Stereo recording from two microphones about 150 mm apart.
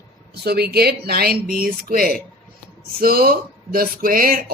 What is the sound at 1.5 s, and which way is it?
Speech, 75° right (ahead or behind).